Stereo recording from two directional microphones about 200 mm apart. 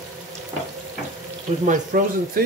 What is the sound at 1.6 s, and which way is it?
Speech, 40° right (ahead or behind).